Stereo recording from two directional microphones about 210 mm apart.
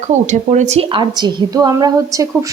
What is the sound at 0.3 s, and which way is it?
A woman's voice, 35° right (ahead or behind).